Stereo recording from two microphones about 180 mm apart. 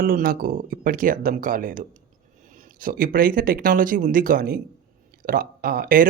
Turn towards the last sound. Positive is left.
turn(degrees=-50)  # may be behind; listen again after turning